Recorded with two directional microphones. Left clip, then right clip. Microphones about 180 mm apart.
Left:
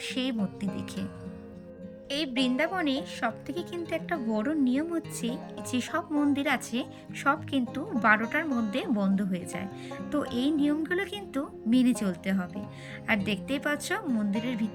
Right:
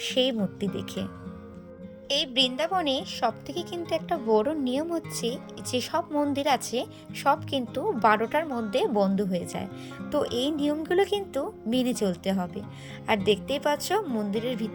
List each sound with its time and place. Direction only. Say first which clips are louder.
0.0 s speech: right 7 dB; 25° right (ahead or behind)
2.0 s a woman's voice: right 5 dB; 35° right (ahead or behind)